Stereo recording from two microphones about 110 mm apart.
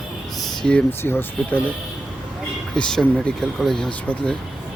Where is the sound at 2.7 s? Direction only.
5° left (ahead or behind).